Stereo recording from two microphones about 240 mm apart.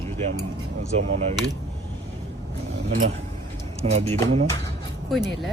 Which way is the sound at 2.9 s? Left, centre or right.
Right.